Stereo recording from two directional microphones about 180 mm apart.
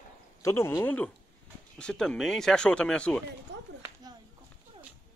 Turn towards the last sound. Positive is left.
turn(degrees=-80)